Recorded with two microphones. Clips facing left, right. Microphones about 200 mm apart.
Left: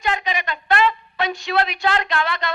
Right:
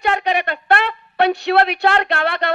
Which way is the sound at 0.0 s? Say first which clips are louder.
Right 5 dB; 65° right (ahead or behind).